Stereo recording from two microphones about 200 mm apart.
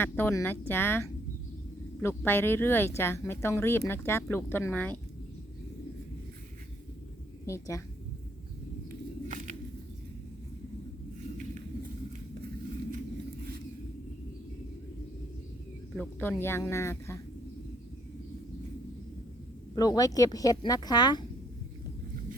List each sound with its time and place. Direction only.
0.0 s speech: 10° left (ahead or behind)
7.4 s a woman's voice: 15° left (ahead or behind)
16.0 s speech: 10° left (ahead or behind)
19.7 s speech: 20° left (ahead or behind)